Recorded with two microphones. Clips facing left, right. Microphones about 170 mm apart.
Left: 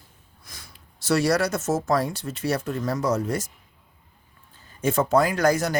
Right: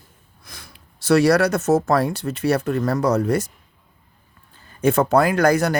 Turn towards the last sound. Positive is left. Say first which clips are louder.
# right 4 dB
turn(degrees=-60)  # may be behind; listen again after turning